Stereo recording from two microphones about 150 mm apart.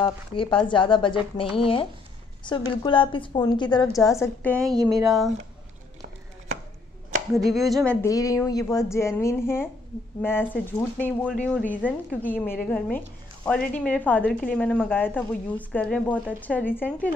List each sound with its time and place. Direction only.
0.0 s speech: 35° left (ahead or behind); by 4.6 s 15° left (ahead or behind)
4.7 s speech: 25° right (ahead or behind)
7.3 s speech: centre (ahead or behind)
8.1 s a woman's voice: 20° left (ahead or behind)